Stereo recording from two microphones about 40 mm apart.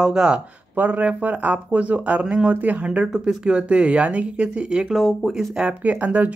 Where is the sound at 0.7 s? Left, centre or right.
Right.